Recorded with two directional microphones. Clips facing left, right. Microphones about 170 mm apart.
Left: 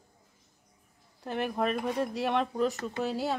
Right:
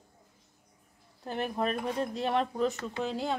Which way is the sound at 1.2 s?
Centre (ahead or behind).